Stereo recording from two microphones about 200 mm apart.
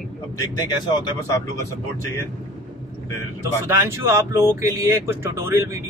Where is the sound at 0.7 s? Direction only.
20° left (ahead or behind).